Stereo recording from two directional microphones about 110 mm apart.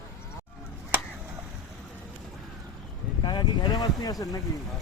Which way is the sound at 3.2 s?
45° left (ahead or behind).